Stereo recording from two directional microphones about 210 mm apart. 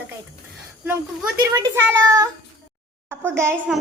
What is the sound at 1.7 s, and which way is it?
A woman's voice, 15° right (ahead or behind).